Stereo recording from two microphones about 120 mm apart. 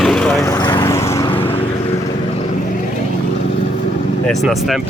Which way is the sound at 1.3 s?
50° left (ahead or behind).